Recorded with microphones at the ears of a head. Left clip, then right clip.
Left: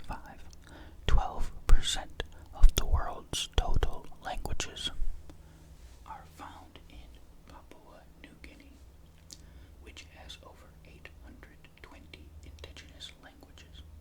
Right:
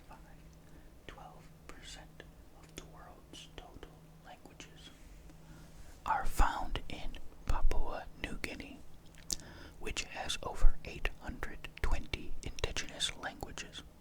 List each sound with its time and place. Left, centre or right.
0.1 s whispering: left
6.0 s whispering: right
9.8 s whispering: right